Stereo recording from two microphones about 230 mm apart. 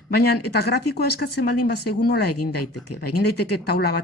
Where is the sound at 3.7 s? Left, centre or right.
Left.